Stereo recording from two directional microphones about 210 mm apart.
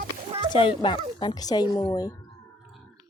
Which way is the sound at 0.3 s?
25° right (ahead or behind).